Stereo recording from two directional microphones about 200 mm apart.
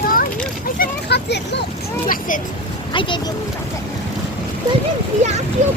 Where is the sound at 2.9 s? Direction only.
25° left (ahead or behind).